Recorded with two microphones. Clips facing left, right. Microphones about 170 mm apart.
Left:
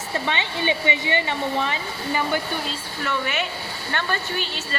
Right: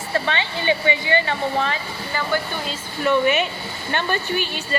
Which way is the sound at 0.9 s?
20° left (ahead or behind).